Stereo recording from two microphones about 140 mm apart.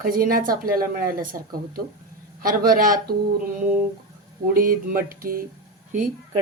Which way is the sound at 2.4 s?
90° right.